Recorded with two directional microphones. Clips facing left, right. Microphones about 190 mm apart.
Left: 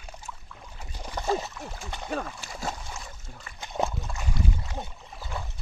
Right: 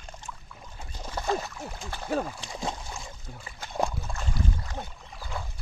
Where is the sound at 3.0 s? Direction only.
15° right (ahead or behind).